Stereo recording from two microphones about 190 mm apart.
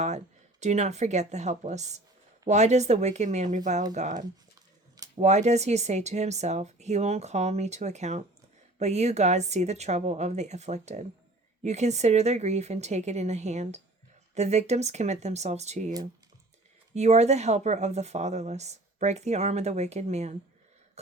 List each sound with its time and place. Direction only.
0.6 s speech: 35° right (ahead or behind)
16.9 s speech: 35° right (ahead or behind)